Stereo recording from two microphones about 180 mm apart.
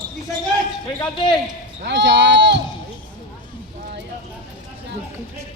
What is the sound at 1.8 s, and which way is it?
Speech, 75° right (ahead or behind).